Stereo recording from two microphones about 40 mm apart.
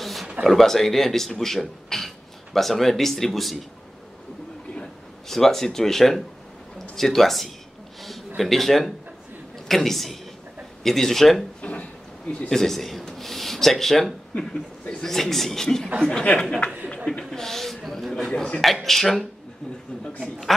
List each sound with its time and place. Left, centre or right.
0.0 s a sound: centre
0.4 s speech: centre
5.3 s speech: centre
11.6 s a sound: left
12.4 s speech: centre
14.3 s speech: centre
15.1 s speech: centre
16.3 s speech: left
17.2 s speech: centre